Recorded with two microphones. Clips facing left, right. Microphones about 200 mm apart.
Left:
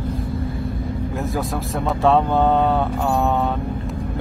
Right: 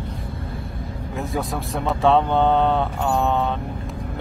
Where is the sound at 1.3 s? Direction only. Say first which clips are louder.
Left 2 dB; centre (ahead or behind).